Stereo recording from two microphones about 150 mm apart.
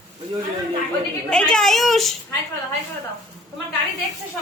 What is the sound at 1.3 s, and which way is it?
Speech, 5° left (ahead or behind).